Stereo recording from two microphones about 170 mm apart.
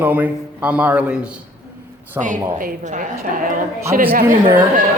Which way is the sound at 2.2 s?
15° right (ahead or behind).